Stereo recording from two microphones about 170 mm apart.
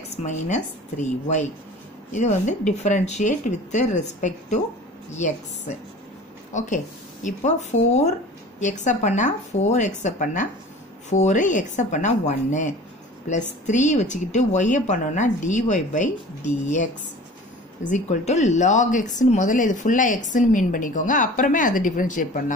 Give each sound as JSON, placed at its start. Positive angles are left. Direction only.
{"t": 0.2, "sound": "speech", "side_deg": 45}